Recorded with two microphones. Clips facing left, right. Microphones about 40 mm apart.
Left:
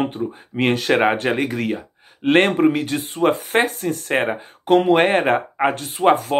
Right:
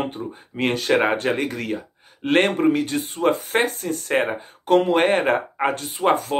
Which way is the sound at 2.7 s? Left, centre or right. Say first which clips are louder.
Left 2 dB; left.